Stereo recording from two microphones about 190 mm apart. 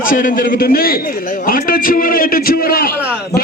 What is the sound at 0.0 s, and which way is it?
A man's voice, 45° left (ahead or behind).